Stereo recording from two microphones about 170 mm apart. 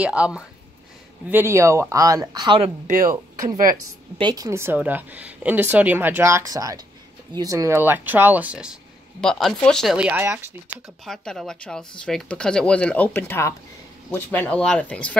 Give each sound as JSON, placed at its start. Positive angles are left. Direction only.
{"t": 0.0, "sound": "speech", "side_deg": -5}
{"t": 9.2, "sound": "speech", "side_deg": 5}
{"t": 9.9, "sound": "speech", "side_deg": -10}
{"t": 11.1, "sound": "speech", "side_deg": 5}